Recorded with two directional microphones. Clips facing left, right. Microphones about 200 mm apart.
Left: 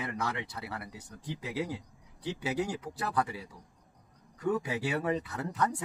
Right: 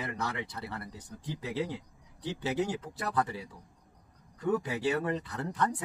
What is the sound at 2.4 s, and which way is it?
Speech, 10° left (ahead or behind).